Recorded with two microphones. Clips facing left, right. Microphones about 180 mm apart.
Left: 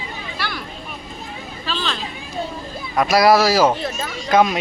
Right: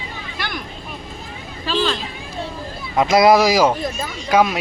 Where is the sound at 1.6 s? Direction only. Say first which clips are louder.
Right 6 dB; 10° right (ahead or behind).